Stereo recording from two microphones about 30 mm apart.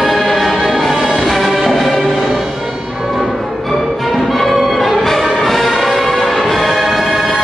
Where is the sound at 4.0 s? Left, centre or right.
Centre.